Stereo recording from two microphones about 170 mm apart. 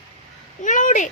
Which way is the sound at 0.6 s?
50° left (ahead or behind).